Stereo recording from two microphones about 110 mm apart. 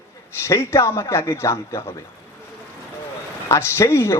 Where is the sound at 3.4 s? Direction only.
25° left (ahead or behind).